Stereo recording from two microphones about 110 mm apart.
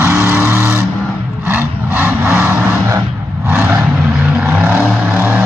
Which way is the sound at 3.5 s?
20° right (ahead or behind).